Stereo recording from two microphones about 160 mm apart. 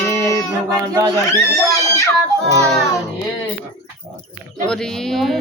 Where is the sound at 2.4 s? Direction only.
20° right (ahead or behind).